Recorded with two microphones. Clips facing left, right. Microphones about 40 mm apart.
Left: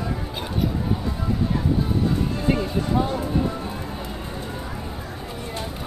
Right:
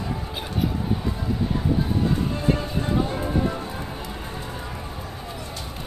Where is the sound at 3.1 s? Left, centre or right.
Right.